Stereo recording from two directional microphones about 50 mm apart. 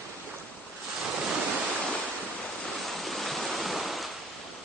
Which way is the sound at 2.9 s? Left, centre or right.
Centre.